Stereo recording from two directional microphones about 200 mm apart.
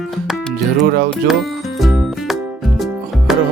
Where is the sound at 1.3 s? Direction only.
Centre (ahead or behind).